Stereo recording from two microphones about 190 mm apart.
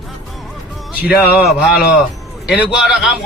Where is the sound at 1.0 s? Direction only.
55° left (ahead or behind).